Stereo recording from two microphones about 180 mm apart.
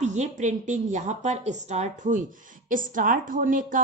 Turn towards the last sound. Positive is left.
turn(degrees=-45)  # may be behind; listen again after turning